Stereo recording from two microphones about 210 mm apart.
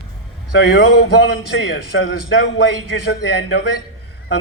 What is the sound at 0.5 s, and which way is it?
A man's voice, 55° left (ahead or behind).